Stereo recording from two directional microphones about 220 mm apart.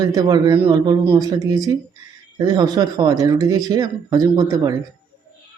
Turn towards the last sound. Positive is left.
turn(degrees=-15)  # may be behind; listen again after turning